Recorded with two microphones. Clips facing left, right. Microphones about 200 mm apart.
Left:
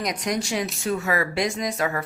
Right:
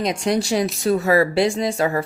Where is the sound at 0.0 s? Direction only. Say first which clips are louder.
Right 6 dB; 30° right (ahead or behind).